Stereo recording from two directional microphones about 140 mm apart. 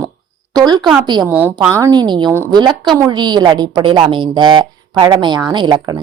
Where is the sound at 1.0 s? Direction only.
30° right (ahead or behind).